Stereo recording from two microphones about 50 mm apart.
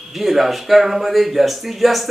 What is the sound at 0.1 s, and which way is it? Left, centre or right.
A man's voice, centre.